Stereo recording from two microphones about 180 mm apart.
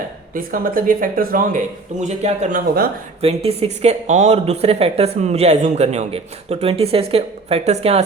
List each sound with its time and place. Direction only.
0.3 s speech: 50° right (ahead or behind)
2.0 s speech: 40° right (ahead or behind)